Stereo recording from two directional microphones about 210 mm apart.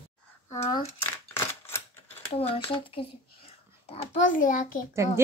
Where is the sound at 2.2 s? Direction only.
25° left (ahead or behind).